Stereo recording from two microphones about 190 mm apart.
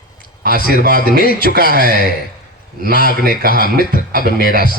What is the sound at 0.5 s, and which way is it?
A man's voice, 50° left (ahead or behind).